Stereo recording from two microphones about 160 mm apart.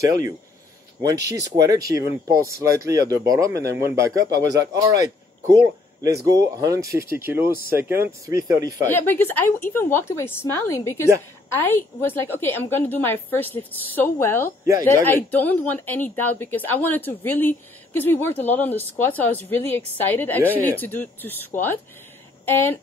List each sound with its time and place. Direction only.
1.4 s speech: 20° right (ahead or behind)
6.2 s speech: 20° right (ahead or behind)
8.9 s a woman's voice: 15° left (ahead or behind)